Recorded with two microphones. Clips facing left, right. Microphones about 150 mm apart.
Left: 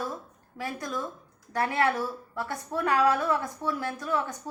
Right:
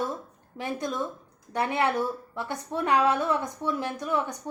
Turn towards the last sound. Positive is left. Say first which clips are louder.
# right 1 dB
turn(degrees=-15)  # may be behind; listen again after turning